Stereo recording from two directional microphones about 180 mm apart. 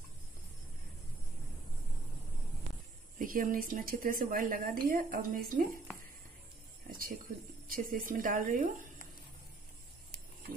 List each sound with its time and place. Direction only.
3.2 s a woman's voice: 50° right (ahead or behind)
6.9 s a woman's voice: 50° right (ahead or behind)